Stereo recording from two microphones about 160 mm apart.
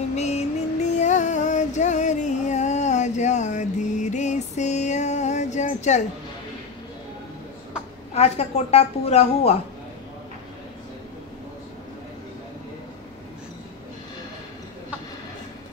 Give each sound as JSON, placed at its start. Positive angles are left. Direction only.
{"t": 0.1, "sound": "music", "side_deg": 45}
{"t": 8.1, "sound": "a woman's voice", "side_deg": 40}